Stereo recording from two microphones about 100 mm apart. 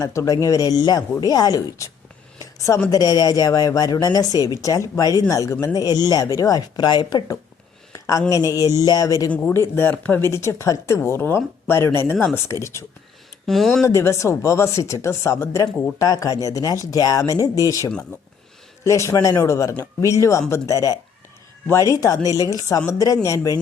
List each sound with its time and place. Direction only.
0.0 s speech: 30° left (ahead or behind)
2.4 s a sound: 35° left (ahead or behind)
2.9 s speech: 40° left (ahead or behind)
7.9 s a sound: 35° left (ahead or behind)
8.3 s speech: 35° left (ahead or behind)
9.5 s speech: 25° left (ahead or behind)
13.5 s speech: centre (ahead or behind)
13.8 s speech: 30° left (ahead or behind)